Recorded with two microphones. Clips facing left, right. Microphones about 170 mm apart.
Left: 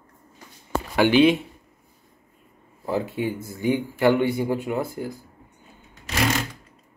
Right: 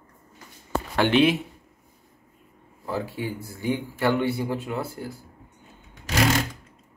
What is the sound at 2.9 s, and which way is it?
Speech, 20° left (ahead or behind).